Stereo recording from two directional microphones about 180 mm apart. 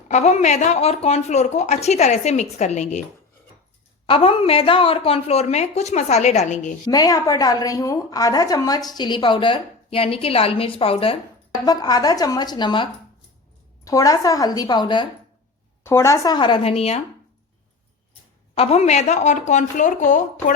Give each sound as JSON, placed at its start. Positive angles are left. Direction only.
{"t": 0.1, "sound": "a woman's voice", "side_deg": 40}
{"t": 4.0, "sound": "a woman's voice", "side_deg": 30}
{"t": 6.8, "sound": "a woman's voice", "side_deg": 20}
{"t": 11.5, "sound": "a woman's voice", "side_deg": 20}
{"t": 18.5, "sound": "a woman's voice", "side_deg": 35}